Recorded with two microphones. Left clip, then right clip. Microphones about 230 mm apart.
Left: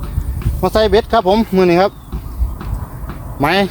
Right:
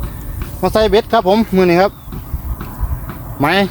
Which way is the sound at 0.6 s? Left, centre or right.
Centre.